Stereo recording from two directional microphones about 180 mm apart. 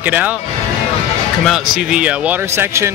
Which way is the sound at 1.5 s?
5° right (ahead or behind).